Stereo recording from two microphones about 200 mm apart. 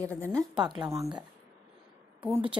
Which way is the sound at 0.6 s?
20° right (ahead or behind).